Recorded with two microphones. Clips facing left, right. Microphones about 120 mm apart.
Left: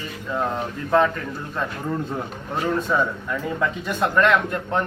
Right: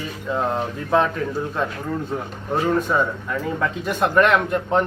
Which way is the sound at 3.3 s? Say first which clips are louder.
Right 1 dB; 5° right (ahead or behind).